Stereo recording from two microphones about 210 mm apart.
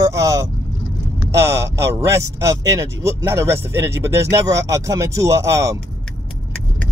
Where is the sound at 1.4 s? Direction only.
15° right (ahead or behind).